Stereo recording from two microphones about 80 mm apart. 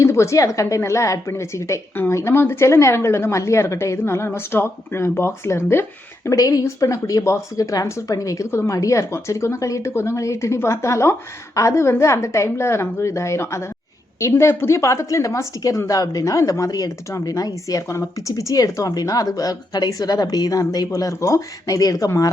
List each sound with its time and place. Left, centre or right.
0.0 s speech: left
6.3 s speech: left